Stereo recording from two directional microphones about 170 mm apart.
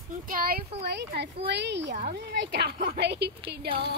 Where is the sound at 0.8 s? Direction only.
80° right.